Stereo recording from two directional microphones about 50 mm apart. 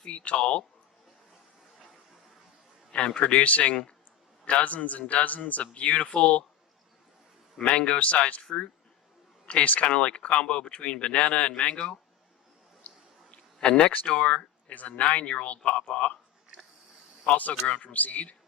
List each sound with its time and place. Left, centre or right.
0.0 s speech: left
2.9 s speech: left
7.6 s speech: left
12.9 s a sound: left
13.6 s speech: centre
17.3 s speech: left